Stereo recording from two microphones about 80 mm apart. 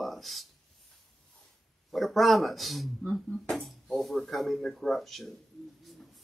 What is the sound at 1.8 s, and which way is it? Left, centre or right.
A man's voice, centre.